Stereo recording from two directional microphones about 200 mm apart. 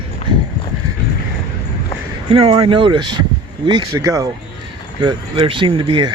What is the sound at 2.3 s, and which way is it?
Speech, 30° right (ahead or behind).